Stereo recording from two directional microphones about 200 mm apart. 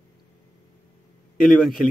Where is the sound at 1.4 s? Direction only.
Centre (ahead or behind).